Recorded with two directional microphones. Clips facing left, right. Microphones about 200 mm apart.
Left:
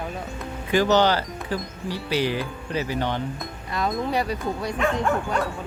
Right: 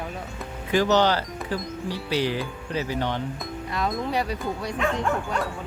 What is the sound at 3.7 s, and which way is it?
Speech, 40° left (ahead or behind).